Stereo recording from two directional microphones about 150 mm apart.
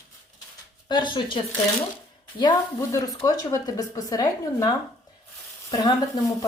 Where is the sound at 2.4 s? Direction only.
25° left (ahead or behind).